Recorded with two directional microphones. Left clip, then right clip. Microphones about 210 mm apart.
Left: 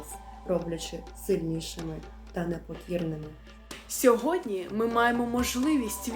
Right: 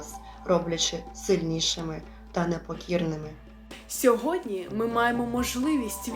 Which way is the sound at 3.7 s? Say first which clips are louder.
Even; centre (ahead or behind).